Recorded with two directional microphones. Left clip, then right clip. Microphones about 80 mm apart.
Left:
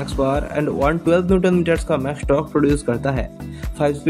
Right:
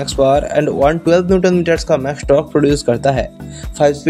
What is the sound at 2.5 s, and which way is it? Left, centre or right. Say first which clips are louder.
Speech: right 5 dB; right.